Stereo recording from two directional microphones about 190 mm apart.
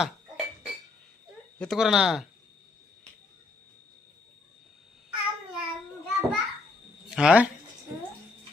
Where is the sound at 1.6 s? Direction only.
Centre (ahead or behind).